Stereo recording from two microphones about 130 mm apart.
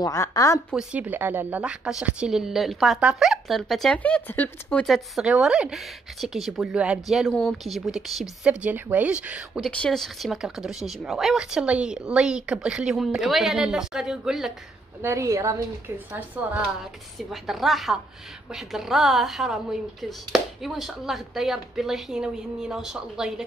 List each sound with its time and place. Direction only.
0.0 s a woman's voice: 25° left (ahead or behind)
0.7 s speech: 10° right (ahead or behind); by 4.8 s 10° left (ahead or behind)
4.8 s speech: centre (ahead or behind)
9.6 s speech: 5° left (ahead or behind)
15.0 s a woman's voice: 20° right (ahead or behind)
16.1 s a woman's voice: 10° right (ahead or behind)
17.3 s speech: centre (ahead or behind)